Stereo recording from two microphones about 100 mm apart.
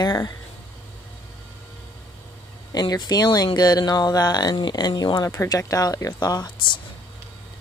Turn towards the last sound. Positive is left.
turn(degrees=40)  # may be behind; listen again after turning